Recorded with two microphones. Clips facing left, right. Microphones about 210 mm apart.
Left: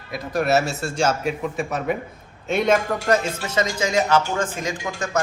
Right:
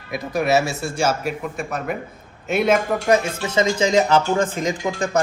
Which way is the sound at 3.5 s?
25° right (ahead or behind).